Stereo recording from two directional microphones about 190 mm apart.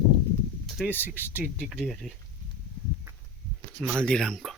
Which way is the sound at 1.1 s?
10° left (ahead or behind).